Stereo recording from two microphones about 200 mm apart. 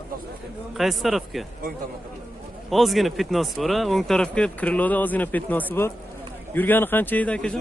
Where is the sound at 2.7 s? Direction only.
Centre (ahead or behind).